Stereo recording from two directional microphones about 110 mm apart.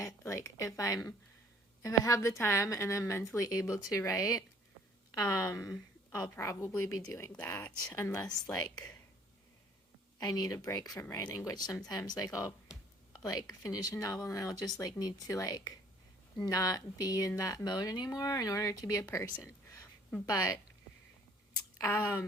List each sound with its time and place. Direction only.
0.3 s a woman's voice: 30° left (ahead or behind)
10.2 s speech: 35° left (ahead or behind)
21.8 s a woman's voice: 20° left (ahead or behind)